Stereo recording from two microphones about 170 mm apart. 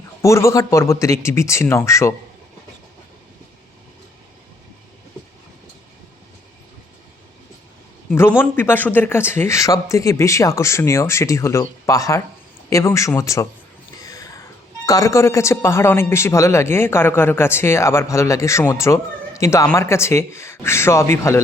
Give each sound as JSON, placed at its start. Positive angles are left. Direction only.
{"t": 0.2, "sound": "a man's voice", "side_deg": 15}
{"t": 8.4, "sound": "a man's voice", "side_deg": 10}
{"t": 14.0, "sound": "a sound", "side_deg": 20}
{"t": 14.8, "sound": "a man's voice", "side_deg": 20}